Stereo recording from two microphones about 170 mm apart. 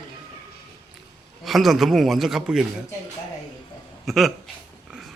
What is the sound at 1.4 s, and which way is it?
Speech, centre (ahead or behind).